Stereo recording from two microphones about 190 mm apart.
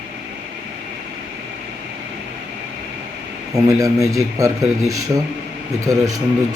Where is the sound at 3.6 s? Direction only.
15° right (ahead or behind).